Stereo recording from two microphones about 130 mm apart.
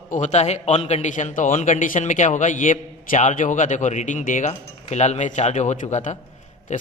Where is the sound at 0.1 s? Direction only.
65° left (ahead or behind).